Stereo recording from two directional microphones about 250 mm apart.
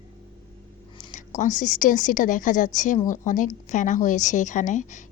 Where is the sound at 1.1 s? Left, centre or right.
Left.